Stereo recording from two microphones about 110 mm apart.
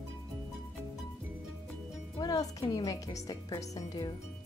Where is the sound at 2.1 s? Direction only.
35° left (ahead or behind).